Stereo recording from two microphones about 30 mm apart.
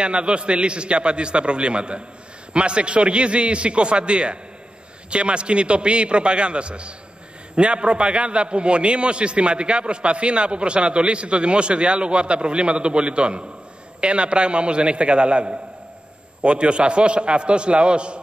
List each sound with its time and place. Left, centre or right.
0.0 s a man's voice: right